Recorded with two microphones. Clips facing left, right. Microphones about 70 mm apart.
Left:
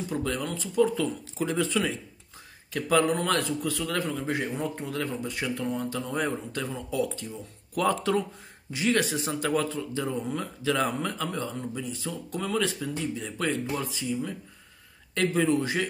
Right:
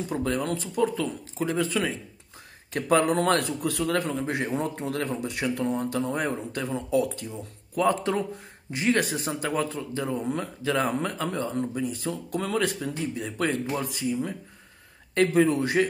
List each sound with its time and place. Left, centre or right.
0.1 s speech: right
3.3 s speech: right
4.6 s a man's voice: right
5.4 s speech: right
7.7 s speech: right